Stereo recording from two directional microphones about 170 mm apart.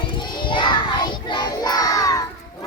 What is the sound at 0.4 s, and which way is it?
Child singing, 25° left (ahead or behind).